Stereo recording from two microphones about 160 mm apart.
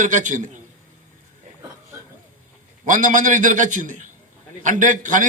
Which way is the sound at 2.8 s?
50° right (ahead or behind).